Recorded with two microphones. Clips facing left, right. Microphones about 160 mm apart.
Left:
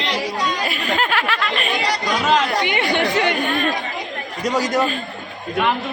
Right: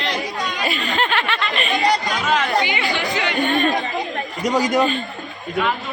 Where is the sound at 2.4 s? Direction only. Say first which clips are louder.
Even; 60° left (ahead or behind).